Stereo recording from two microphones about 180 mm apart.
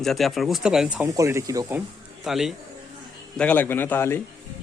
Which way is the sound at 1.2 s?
15° right (ahead or behind).